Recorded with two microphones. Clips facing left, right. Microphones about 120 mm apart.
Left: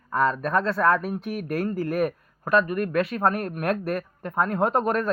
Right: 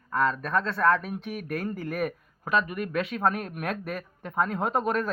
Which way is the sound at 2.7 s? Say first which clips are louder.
Left 5 dB; 50° left (ahead or behind).